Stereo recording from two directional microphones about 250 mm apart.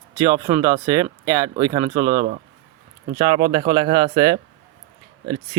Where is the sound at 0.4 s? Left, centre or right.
Centre.